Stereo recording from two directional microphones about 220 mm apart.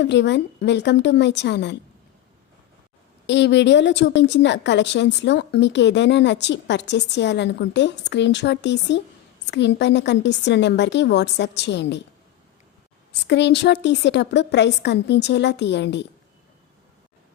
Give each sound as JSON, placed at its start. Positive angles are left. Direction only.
{"t": 0.0, "sound": "a woman's voice", "side_deg": 50}
{"t": 3.2, "sound": "a woman's voice", "side_deg": 55}
{"t": 13.2, "sound": "a woman's voice", "side_deg": 50}